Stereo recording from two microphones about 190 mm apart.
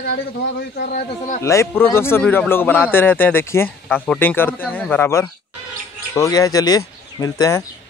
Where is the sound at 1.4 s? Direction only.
15° left (ahead or behind).